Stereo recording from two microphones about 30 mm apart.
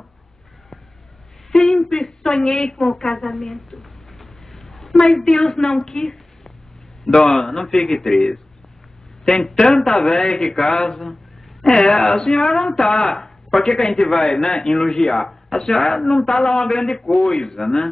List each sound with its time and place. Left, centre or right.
1.5 s a sound: centre
2.2 s a woman's voice: centre
4.1 s a sound: centre
5.2 s a man's voice: centre
10.3 s speech: centre
11.9 s speech: centre
13.5 s speech: centre
15.2 s a man's voice: left